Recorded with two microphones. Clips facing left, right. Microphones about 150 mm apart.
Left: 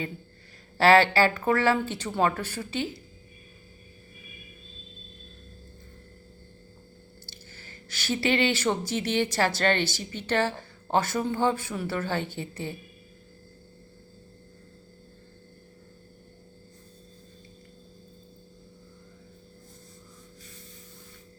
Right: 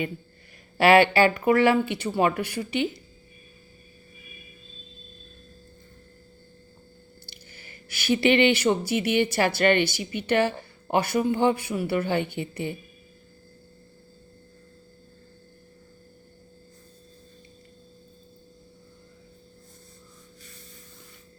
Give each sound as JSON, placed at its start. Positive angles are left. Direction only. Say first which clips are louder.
{"t": 0.8, "sound": "speech", "louder": "right 2 dB", "side_deg": -15}
{"t": 7.3, "sound": "speech", "louder": "left 1 dB", "side_deg": -15}